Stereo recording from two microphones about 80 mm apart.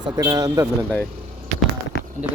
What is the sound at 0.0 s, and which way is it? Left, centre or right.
Speech, right.